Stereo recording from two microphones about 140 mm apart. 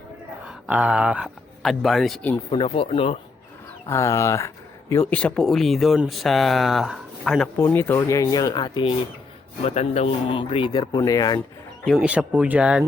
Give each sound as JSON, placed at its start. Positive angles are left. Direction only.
{"t": 0.4, "sound": "speech", "side_deg": -10}
{"t": 2.5, "sound": "speech", "side_deg": 40}
{"t": 3.8, "sound": "speech", "side_deg": 20}
{"t": 5.1, "sound": "speech", "side_deg": 5}
{"t": 7.6, "sound": "speech", "side_deg": 15}
{"t": 9.6, "sound": "speech", "side_deg": 50}
{"t": 11.9, "sound": "speech", "side_deg": -10}